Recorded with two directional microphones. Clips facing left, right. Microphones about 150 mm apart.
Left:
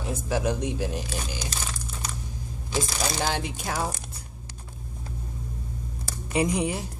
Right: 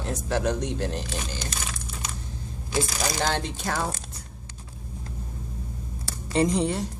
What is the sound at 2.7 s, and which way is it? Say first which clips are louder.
Speech: right 1 dB; 10° left (ahead or behind).